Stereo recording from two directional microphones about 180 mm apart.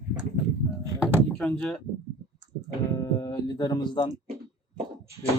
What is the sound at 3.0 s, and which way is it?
Speech, 20° left (ahead or behind).